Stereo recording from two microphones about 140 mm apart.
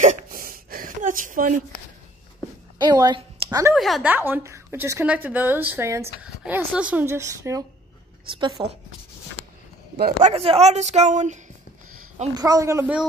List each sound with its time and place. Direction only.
0.0 s a sound: 80° right
2.8 s speech: 30° right (ahead or behind)
3.4 s speech: 20° right (ahead or behind)
3.7 s speech: centre (ahead or behind)
4.1 s a woman's voice: 15° right (ahead or behind)
8.3 s a woman's voice: 35° right (ahead or behind)
9.9 s speech: 90° right
10.3 s a woman's voice: 45° right (ahead or behind)
12.4 s speech: 25° right (ahead or behind)